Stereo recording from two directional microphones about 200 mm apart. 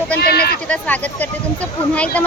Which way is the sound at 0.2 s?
50° left (ahead or behind).